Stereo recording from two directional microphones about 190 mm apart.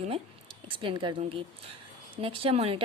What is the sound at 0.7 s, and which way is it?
A woman's voice, 25° right (ahead or behind).